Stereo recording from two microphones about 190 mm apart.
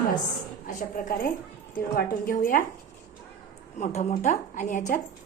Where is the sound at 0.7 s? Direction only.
45° left (ahead or behind).